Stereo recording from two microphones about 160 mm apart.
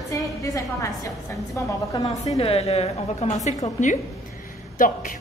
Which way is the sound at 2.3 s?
40° left (ahead or behind).